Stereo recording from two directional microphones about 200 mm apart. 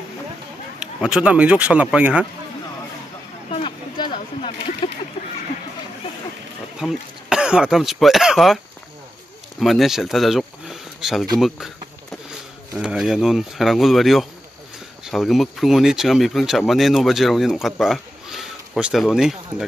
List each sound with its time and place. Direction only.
0.7 s speech: 5° right (ahead or behind)
3.4 s a sound: 25° left (ahead or behind)
6.8 s speech: 5° right (ahead or behind)
9.6 s speech: centre (ahead or behind)
12.7 s speech: 5° right (ahead or behind)